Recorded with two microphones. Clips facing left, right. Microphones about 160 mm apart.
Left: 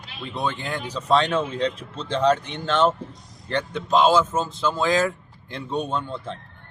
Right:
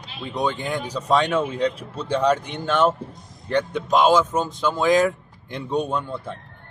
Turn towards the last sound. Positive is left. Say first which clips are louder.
# right 1 dB
turn(degrees=-10)  # may be behind; listen again after turning